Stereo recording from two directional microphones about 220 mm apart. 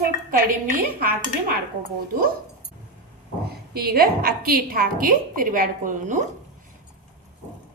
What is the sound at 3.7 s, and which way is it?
A woman's voice, 45° right (ahead or behind).